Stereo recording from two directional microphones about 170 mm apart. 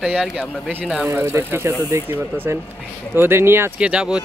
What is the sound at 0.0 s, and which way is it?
Speech, centre (ahead or behind).